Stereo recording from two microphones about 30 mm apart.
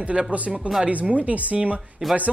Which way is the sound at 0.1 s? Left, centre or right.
Right.